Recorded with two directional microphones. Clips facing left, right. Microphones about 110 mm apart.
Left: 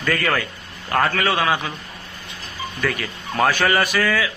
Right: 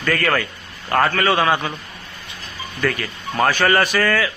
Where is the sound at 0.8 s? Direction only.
Centre (ahead or behind).